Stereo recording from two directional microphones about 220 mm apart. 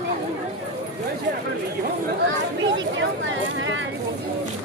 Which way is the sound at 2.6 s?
55° right (ahead or behind).